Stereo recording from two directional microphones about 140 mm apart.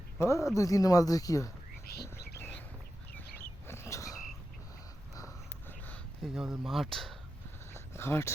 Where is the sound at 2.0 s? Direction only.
20° left (ahead or behind).